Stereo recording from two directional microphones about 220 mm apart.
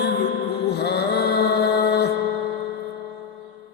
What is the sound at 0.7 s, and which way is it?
Mantra, 50° left (ahead or behind).